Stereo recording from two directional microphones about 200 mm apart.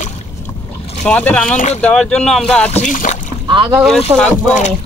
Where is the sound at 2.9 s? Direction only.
40° left (ahead or behind).